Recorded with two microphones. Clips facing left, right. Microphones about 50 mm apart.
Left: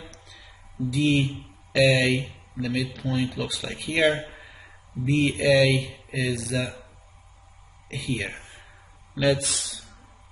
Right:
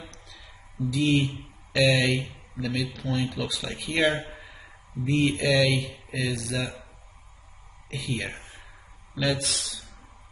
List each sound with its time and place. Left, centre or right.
0.8 s speech: centre
7.9 s speech: centre
8.3 s a sound: left
9.2 s speech: centre